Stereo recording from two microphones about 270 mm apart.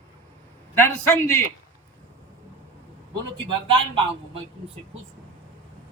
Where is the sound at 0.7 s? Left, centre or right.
Centre.